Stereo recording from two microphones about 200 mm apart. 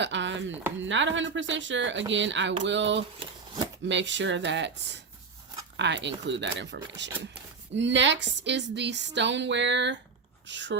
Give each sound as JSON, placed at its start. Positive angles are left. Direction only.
{"t": 0.0, "sound": "chopping", "side_deg": -65}
{"t": 0.8, "sound": "speech", "side_deg": -70}
{"t": 3.2, "sound": "a sound", "side_deg": -20}
{"t": 3.8, "sound": "speech", "side_deg": -65}